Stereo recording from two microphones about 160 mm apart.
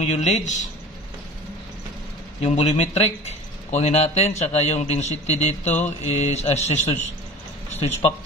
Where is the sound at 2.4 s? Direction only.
40° left (ahead or behind).